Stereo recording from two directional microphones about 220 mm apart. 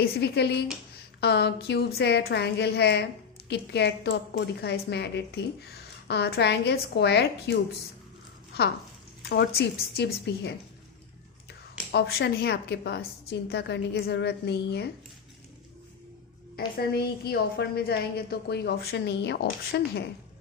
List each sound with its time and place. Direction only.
0.0 s a woman's voice: 50° left (ahead or behind)
9.3 s a woman's voice: 50° left (ahead or behind)
11.9 s a woman's voice: 45° left (ahead or behind)
16.6 s a woman's voice: 45° left (ahead or behind)